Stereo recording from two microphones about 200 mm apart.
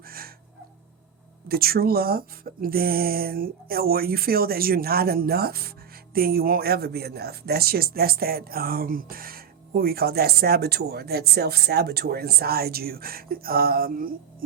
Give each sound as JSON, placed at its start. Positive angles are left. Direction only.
{"t": 0.0, "sound": "cat", "side_deg": -50}
{"t": 1.5, "sound": "speech", "side_deg": -50}